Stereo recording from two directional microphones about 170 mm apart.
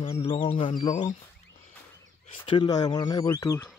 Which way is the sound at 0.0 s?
35° left (ahead or behind).